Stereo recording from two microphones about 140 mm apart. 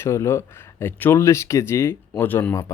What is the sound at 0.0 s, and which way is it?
Speech, 20° left (ahead or behind).